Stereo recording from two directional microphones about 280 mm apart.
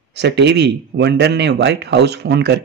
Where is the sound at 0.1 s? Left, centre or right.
Right.